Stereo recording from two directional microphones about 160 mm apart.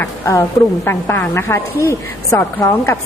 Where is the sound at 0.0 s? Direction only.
15° left (ahead or behind).